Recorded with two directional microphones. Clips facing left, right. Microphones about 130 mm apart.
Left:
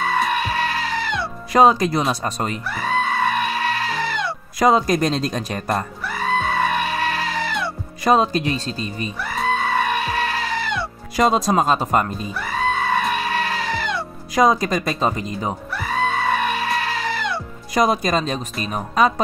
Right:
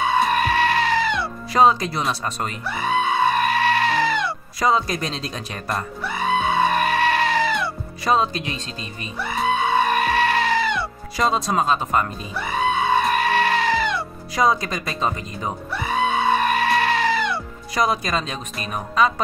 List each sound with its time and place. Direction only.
0.0 s music: centre (ahead or behind)
1.5 s speech: 45° left (ahead or behind)
2.7 s goat: 5° right (ahead or behind)
4.6 s speech: 45° left (ahead or behind)
6.0 s music: 5° right (ahead or behind)
8.0 s speech: 45° left (ahead or behind)
9.2 s music: centre (ahead or behind)
11.1 s speech: 45° left (ahead or behind)
12.4 s music: centre (ahead or behind)
14.3 s speech: 45° left (ahead or behind)
15.7 s music: 5° right (ahead or behind)
17.7 s speech: 40° left (ahead or behind)